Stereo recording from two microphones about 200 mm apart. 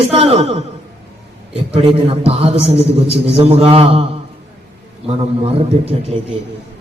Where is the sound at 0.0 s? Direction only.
30° right (ahead or behind).